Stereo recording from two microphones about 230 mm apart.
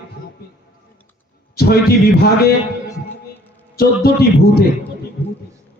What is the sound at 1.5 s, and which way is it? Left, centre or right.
A man's voice, left.